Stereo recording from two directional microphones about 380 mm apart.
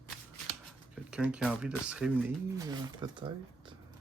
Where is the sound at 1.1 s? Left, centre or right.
Centre.